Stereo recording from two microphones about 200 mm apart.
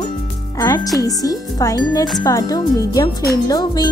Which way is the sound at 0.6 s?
15° left (ahead or behind).